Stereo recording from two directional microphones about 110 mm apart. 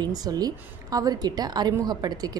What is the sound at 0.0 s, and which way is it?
A woman's voice, 35° right (ahead or behind).